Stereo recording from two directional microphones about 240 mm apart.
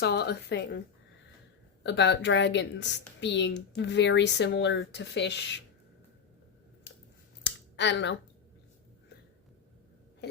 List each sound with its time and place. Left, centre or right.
0.0 s speech: left
1.8 s speech: left
7.4 s a sound: left